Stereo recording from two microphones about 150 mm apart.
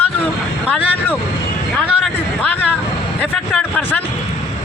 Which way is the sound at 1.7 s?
5° left (ahead or behind).